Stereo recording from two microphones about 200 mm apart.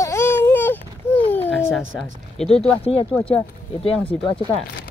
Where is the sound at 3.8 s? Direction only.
30° left (ahead or behind).